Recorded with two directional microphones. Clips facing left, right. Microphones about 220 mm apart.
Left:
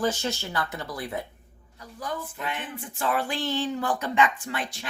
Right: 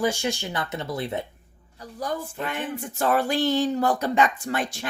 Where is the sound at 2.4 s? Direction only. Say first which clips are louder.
Right 5 dB; 45° right (ahead or behind).